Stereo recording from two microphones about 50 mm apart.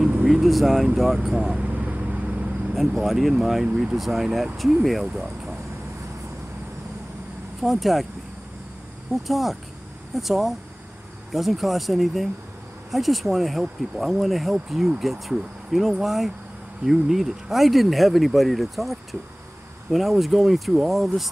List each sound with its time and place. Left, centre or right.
0.3 s speech: centre
1.3 s speech: centre
1.6 s vehicle: right
2.9 s speech: centre
3.6 s speech: centre
3.9 s speech: centre
7.6 s speech: centre
9.1 s speech: centre